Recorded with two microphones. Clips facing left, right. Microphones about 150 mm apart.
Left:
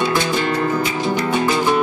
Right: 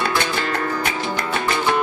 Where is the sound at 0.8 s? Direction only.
55° right (ahead or behind).